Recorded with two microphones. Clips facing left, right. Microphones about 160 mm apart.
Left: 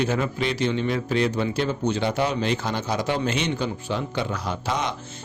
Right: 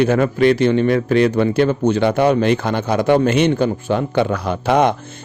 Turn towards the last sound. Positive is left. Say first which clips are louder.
# right 11 dB
turn(degrees=-60)  # may be behind; listen again after turning